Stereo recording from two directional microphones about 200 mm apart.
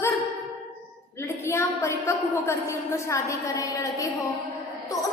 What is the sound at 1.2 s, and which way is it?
A woman's voice, 15° left (ahead or behind).